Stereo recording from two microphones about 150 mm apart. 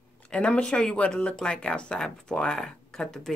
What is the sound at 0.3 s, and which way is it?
Speech, 5° left (ahead or behind).